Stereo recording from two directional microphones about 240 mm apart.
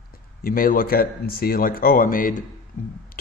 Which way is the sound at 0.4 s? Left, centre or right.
Left.